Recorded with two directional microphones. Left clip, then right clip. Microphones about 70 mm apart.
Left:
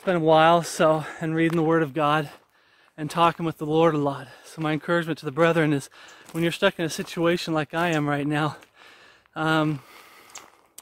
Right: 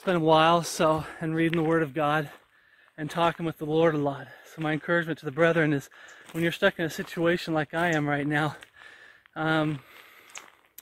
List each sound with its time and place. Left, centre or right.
0.0 s speech: centre
0.4 s speech: centre
3.3 s speech: left; by 4.6 s centre
4.6 s speech: left
6.2 s speech: left
6.5 s speech: left